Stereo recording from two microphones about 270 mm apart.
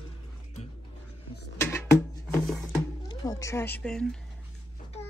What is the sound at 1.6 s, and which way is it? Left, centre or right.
Music, centre.